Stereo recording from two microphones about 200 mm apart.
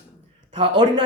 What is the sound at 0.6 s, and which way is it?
Speech, 25° right (ahead or behind).